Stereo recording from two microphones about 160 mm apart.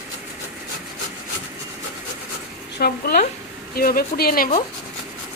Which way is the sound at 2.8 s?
70° left (ahead or behind).